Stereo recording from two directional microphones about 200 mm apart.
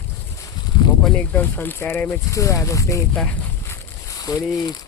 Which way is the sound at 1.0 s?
5° left (ahead or behind).